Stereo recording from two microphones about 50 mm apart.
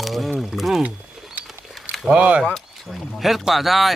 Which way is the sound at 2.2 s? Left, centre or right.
Right.